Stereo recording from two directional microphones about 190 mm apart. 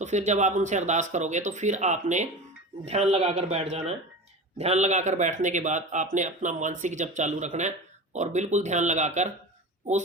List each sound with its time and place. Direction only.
0.0 s speech: 35° right (ahead or behind)